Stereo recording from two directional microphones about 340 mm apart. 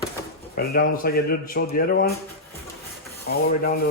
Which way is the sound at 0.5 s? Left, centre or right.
Left.